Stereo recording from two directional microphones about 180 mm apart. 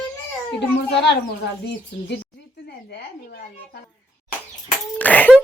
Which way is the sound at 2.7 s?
60° left (ahead or behind).